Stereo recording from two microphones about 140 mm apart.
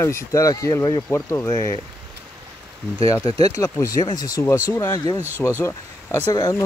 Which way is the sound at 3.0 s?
25° left (ahead or behind).